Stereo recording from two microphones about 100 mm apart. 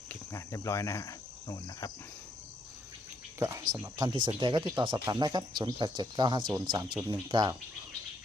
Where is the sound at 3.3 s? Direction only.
30° right (ahead or behind); by 7.5 s 45° right (ahead or behind).